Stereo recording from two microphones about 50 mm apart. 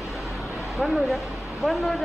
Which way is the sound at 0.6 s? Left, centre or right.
Centre.